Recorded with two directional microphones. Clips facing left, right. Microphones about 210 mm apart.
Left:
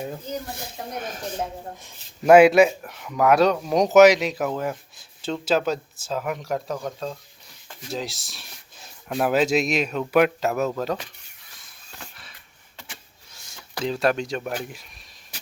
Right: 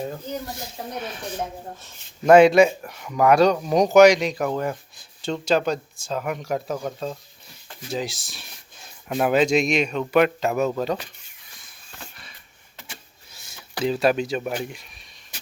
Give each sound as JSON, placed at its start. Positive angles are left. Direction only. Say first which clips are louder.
{"t": 0.9, "sound": "a woman's voice", "louder": "even", "side_deg": 45}
{"t": 1.8, "sound": "speech", "louder": "right 2 dB", "side_deg": 5}
{"t": 12.1, "sound": "a sound", "louder": "right 1 dB", "side_deg": 0}
{"t": 13.3, "sound": "speech", "louder": "right 1 dB", "side_deg": -5}